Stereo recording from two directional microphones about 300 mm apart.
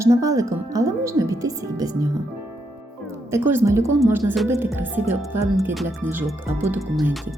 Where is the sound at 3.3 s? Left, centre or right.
Centre.